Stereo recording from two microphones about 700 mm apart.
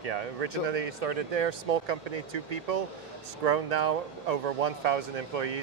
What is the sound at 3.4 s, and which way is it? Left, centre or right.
Speech, right.